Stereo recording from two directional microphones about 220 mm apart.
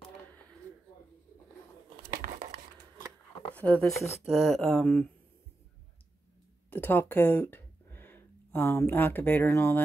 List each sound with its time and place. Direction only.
2.2 s a sound: 40° right (ahead or behind)
3.5 s speech: 5° left (ahead or behind)
6.7 s speech: 10° left (ahead or behind)